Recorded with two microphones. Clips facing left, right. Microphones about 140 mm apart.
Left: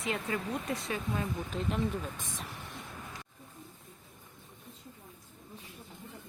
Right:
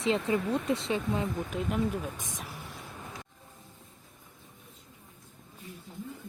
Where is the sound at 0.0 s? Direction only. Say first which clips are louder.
Right 7 dB; 30° right (ahead or behind).